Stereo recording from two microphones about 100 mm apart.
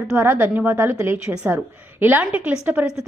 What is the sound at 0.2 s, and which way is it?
A woman's voice, 20° right (ahead or behind).